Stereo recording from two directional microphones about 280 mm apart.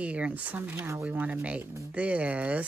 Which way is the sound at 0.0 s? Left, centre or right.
Centre.